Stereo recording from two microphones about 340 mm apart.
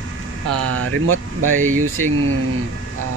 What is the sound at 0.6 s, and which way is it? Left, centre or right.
Speech, right.